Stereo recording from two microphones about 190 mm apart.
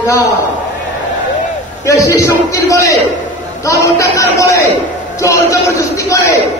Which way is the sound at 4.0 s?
15° left (ahead or behind).